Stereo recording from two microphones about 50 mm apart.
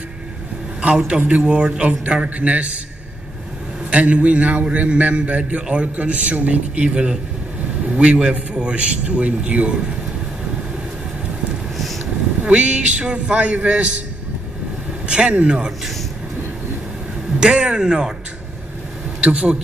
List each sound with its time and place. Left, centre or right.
0.7 s a man's voice: right
3.9 s a man's voice: right
11.7 s a sound: centre
12.4 s a man's voice: right
15.0 s a man's voice: right
17.4 s speech: centre
19.2 s a man's voice: right